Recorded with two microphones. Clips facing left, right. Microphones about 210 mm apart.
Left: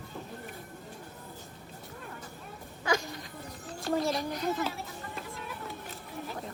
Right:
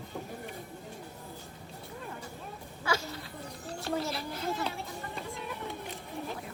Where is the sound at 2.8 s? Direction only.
15° left (ahead or behind).